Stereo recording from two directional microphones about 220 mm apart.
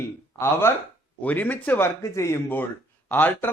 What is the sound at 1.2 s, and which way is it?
Speech, 5° left (ahead or behind).